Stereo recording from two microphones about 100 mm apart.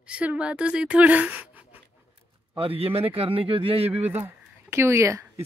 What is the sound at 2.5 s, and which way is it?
A man's voice, 70° right (ahead or behind).